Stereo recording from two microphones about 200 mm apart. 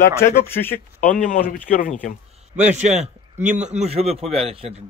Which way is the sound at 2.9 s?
5° right (ahead or behind).